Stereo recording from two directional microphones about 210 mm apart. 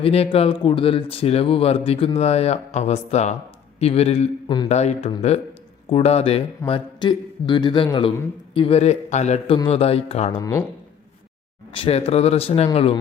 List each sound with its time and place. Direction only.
0.0 s speech: 30° left (ahead or behind)
4.7 s a man's voice: 30° left (ahead or behind)
11.7 s speech: 25° left (ahead or behind)